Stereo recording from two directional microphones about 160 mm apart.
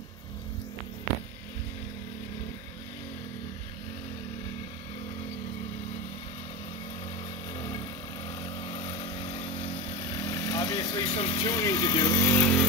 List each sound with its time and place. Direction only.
7.5 s vehicle: 25° left (ahead or behind)
11.1 s speech: 35° left (ahead or behind)
11.5 s speech: 20° left (ahead or behind)